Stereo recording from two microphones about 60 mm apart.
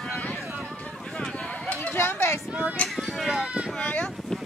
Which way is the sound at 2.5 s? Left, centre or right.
Right.